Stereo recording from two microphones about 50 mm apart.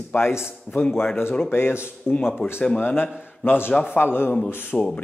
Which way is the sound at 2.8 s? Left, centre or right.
Left.